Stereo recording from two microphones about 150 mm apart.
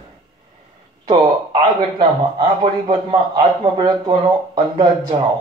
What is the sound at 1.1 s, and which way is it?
A man's voice, 30° right (ahead or behind).